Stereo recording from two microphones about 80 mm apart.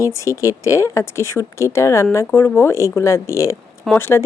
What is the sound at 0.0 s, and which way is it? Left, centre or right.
Speech, left.